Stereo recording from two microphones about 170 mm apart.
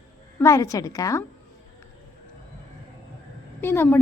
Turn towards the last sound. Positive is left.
turn(degrees=15)  # may be behind; listen again after turning